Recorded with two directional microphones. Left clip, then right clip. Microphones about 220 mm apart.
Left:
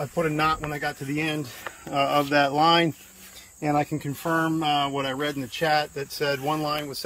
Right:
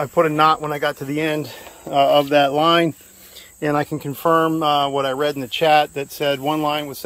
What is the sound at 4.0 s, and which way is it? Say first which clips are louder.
Speech: right 9 dB; centre (ahead or behind).